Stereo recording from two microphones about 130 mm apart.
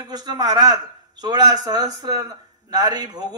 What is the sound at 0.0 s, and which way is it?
A man's voice, 30° right (ahead or behind).